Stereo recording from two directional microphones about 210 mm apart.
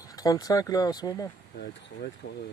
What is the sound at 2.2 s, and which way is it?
Speech, 50° left (ahead or behind).